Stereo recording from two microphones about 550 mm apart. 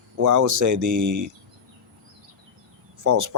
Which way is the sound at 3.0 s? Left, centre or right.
Right.